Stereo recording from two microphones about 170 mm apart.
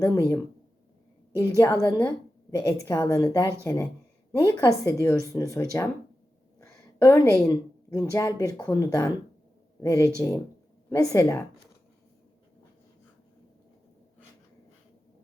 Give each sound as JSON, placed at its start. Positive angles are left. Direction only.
{"t": 0.0, "sound": "speech", "side_deg": 20}
{"t": 1.4, "sound": "speech", "side_deg": 20}
{"t": 6.6, "sound": "a sound", "side_deg": 20}
{"t": 7.4, "sound": "speech", "side_deg": 20}